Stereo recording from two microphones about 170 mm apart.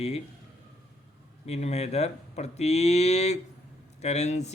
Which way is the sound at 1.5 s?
40° left (ahead or behind).